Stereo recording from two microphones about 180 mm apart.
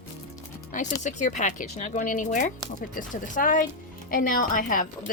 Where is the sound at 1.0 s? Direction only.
45° left (ahead or behind).